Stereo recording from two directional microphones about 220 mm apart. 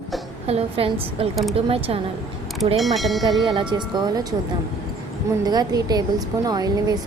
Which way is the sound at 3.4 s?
20° right (ahead or behind).